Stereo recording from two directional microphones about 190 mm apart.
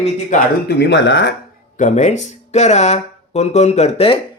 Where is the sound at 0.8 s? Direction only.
70° left (ahead or behind).